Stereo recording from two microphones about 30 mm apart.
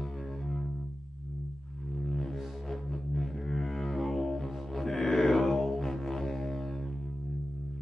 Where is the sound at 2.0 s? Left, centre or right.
Centre.